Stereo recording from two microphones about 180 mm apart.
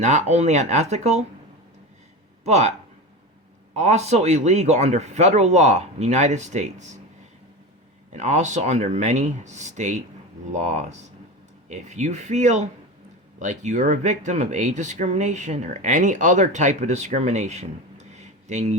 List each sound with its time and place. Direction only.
0.0 s speech: 40° right (ahead or behind)
2.4 s speech: 40° right (ahead or behind)
3.8 s speech: 40° right (ahead or behind)
8.1 s speech: 40° right (ahead or behind)